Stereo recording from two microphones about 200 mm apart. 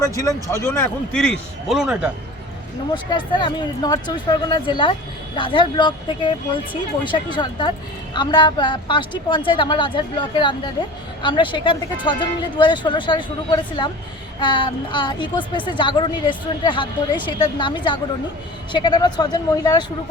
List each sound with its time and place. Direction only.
0.0 s a man's voice: 15° left (ahead or behind); by 2.1 s 5° right (ahead or behind)
2.9 s a woman's voice: 25° left (ahead or behind)